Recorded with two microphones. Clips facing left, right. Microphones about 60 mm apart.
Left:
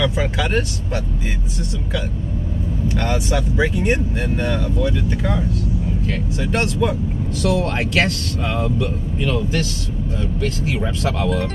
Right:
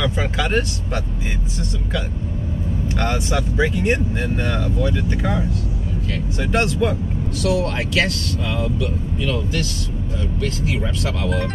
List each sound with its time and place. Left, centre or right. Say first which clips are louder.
0.1 s speech: even; centre
2.9 s speech: left 1 dB; centre
7.5 s speech: left 1 dB; left
10.8 s speech: left 3 dB; left